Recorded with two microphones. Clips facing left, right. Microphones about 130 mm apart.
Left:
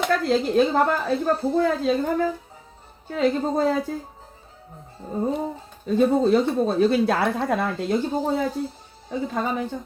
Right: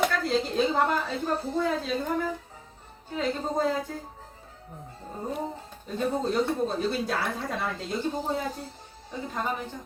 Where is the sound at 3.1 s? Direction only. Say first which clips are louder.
Left 7 dB; 75° left (ahead or behind).